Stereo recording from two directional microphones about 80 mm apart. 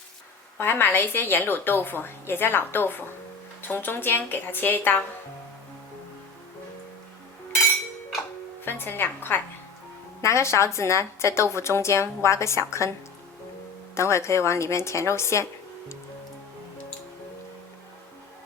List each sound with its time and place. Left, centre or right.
0.6 s a woman's voice: left
8.6 s a woman's voice: left
10.2 s a woman's voice: left
13.9 s a woman's voice: left